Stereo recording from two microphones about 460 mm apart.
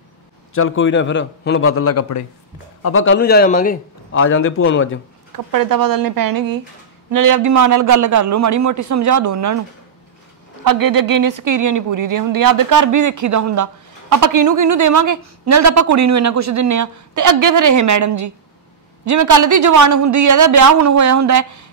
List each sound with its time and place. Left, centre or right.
0.6 s a man's voice: left
5.3 s speech: right
10.6 s speech: right